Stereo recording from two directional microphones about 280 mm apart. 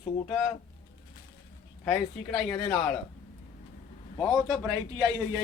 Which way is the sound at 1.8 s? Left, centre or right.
Centre.